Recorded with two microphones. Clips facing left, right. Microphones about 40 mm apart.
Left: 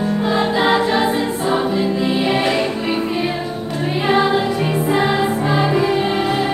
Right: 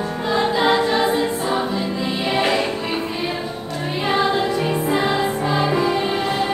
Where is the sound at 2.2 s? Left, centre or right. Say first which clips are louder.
Right 2 dB; centre.